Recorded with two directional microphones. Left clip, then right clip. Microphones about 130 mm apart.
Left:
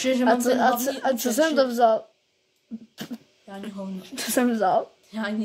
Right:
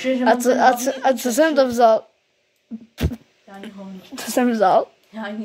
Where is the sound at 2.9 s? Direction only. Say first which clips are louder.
Right 10 dB; 25° right (ahead or behind).